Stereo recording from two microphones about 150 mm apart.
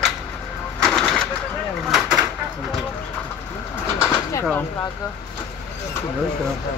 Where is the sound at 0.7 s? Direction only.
5° left (ahead or behind).